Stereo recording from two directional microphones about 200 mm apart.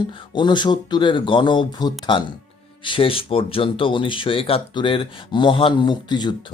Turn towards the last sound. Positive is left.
turn(degrees=20)  # may be behind; listen again after turning